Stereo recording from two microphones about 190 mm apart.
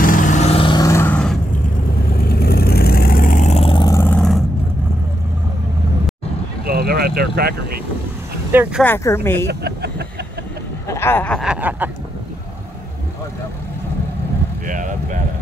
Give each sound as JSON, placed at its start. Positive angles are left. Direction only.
{"t": 0.0, "sound": "vehicle", "side_deg": 45}
{"t": 2.0, "sound": "vehicle", "side_deg": 55}
{"t": 6.6, "sound": "vehicle", "side_deg": -55}
{"t": 8.5, "sound": "a sound", "side_deg": -10}
{"t": 8.8, "sound": "speech", "side_deg": 10}
{"t": 9.5, "sound": "vehicle", "side_deg": -60}
{"t": 10.9, "sound": "speech", "side_deg": 10}
{"t": 11.4, "sound": "a sound", "side_deg": -10}
{"t": 14.7, "sound": "vehicle", "side_deg": -45}